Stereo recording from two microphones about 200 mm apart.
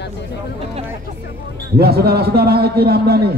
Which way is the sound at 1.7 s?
50° right (ahead or behind).